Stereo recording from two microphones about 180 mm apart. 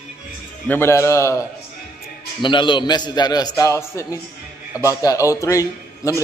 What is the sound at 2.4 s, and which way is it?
A man's voice, 25° left (ahead or behind).